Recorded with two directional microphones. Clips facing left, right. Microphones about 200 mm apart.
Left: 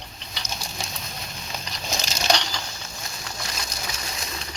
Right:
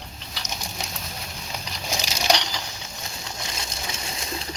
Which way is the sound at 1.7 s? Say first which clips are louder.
Right 1 dB; 10° right (ahead or behind).